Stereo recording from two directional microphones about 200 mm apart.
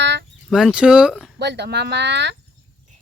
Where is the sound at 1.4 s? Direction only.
55° right (ahead or behind).